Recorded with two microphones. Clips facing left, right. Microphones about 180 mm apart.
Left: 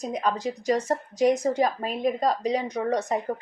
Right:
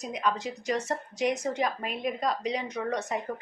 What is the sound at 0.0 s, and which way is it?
Speech, 40° left (ahead or behind).